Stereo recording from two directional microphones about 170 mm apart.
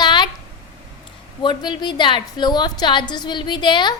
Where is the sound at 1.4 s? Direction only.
25° left (ahead or behind).